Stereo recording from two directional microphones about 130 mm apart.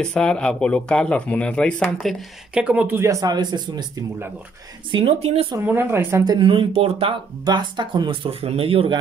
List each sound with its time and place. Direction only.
0.0 s speech: 5° left (ahead or behind)
2.5 s speech: 10° right (ahead or behind); by 3.8 s 30° right (ahead or behind)
4.9 s speech: 45° right (ahead or behind)
5.6 s speech: 15° right (ahead or behind)
6.2 s speech: 40° right (ahead or behind)
7.4 s speech: 35° right (ahead or behind)